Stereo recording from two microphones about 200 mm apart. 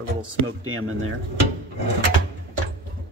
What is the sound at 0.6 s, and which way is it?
Speech, 90° right.